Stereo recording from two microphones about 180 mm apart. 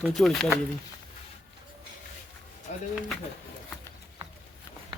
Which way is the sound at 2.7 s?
40° left (ahead or behind).